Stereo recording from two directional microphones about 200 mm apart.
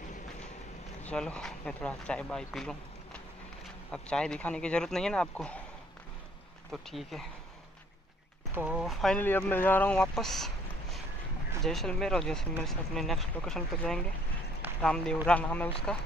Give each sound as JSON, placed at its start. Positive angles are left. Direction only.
{"t": 1.0, "sound": "speech", "side_deg": 5}
{"t": 6.7, "sound": "speech", "side_deg": 0}
{"t": 8.5, "sound": "speech", "side_deg": -5}